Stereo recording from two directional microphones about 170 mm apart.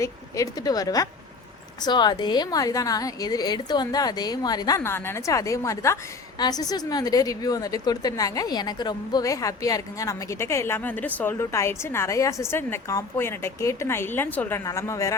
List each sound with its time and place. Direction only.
0.0 s a woman's voice: 20° left (ahead or behind)